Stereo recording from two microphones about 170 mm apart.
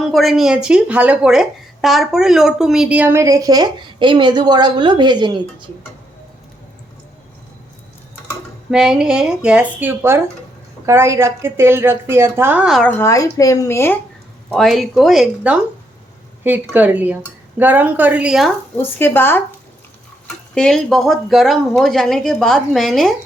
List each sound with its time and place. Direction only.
0.0 s a woman's voice: centre (ahead or behind); by 5.6 s 25° right (ahead or behind)
8.7 s a woman's voice: 5° right (ahead or behind)
12.9 s speech: 15° left (ahead or behind)
14.5 s a woman's voice: centre (ahead or behind)
18.8 s speech: 15° left (ahead or behind)